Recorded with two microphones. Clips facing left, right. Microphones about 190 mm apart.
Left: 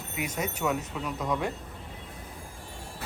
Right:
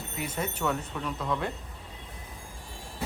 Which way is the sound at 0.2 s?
10° left (ahead or behind).